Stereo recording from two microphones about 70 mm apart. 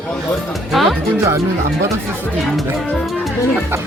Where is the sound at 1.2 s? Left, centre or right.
Right.